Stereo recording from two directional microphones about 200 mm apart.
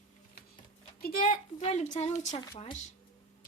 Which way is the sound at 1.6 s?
35° left (ahead or behind).